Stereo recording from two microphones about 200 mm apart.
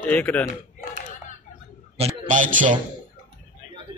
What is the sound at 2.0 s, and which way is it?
Speech, 35° right (ahead or behind).